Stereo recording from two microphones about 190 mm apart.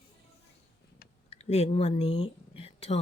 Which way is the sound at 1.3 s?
35° left (ahead or behind).